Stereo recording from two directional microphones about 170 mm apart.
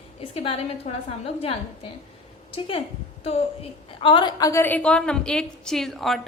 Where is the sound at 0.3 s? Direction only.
35° left (ahead or behind).